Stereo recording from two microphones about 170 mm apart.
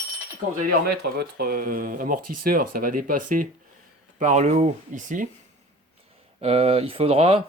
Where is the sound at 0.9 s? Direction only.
65° right (ahead or behind); by 5.3 s 50° right (ahead or behind).